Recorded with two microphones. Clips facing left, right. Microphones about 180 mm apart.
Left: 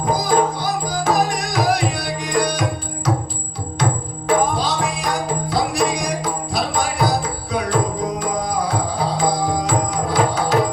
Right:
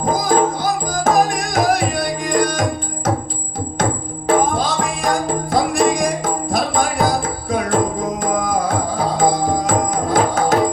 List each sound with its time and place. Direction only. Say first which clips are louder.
0.1 s music: right 1 dB; 45° right (ahead or behind)
4.4 s music: right 2 dB; 50° right (ahead or behind)